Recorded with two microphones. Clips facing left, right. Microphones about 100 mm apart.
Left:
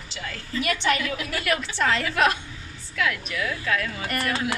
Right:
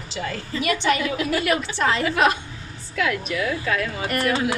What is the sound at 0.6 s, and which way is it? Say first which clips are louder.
Speech: right 3 dB; 5° right (ahead or behind).